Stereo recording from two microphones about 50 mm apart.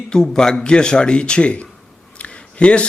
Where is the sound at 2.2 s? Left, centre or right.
Left.